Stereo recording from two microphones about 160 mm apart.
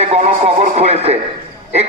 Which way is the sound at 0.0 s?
40° right (ahead or behind).